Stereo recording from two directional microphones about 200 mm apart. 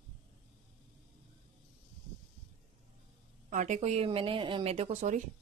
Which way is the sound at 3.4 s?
35° right (ahead or behind).